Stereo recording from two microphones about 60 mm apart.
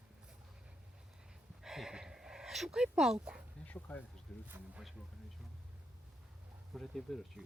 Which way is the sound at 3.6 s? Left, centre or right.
Left.